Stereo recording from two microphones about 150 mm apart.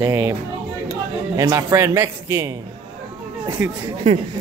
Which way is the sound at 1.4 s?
25° right (ahead or behind).